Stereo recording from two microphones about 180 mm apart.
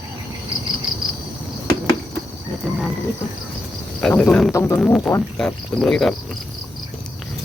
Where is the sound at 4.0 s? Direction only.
5° left (ahead or behind).